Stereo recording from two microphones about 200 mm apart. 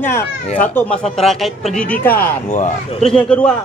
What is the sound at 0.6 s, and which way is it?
Speech, 10° left (ahead or behind).